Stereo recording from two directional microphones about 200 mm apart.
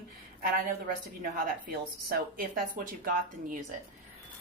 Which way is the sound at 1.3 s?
45° right (ahead or behind).